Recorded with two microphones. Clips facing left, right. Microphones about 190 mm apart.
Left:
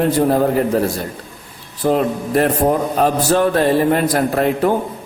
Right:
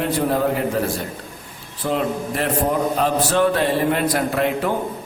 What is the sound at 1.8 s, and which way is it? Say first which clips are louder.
A man's voice: left 5 dB; 45° left (ahead or behind).